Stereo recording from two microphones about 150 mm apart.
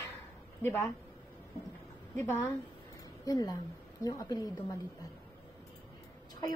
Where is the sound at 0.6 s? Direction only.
15° left (ahead or behind).